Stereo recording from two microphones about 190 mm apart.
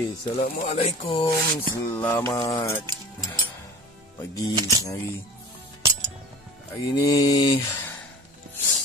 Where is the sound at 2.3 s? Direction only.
20° left (ahead or behind).